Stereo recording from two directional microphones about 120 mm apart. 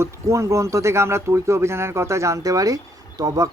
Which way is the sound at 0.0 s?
25° right (ahead or behind).